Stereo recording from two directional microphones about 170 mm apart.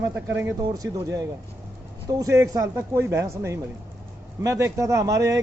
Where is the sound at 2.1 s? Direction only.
20° right (ahead or behind).